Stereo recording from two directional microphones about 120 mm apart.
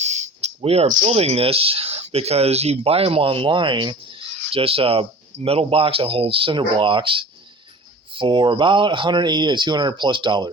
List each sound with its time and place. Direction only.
0.0 s speech: 70° right (ahead or behind); by 10.5 s 40° right (ahead or behind)